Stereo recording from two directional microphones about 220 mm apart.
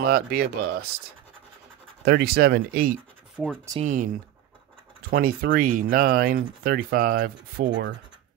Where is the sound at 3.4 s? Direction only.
5° right (ahead or behind).